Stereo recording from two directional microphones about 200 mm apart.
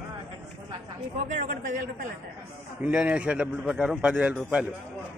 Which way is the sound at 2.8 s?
5° right (ahead or behind).